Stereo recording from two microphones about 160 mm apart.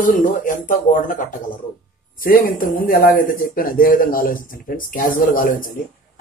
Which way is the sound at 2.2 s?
65° left (ahead or behind).